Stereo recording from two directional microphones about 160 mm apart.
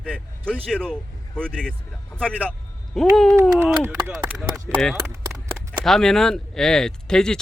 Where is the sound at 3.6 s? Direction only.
15° right (ahead or behind).